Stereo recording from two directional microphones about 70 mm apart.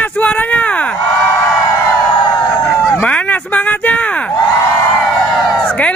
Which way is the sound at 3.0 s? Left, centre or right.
Centre.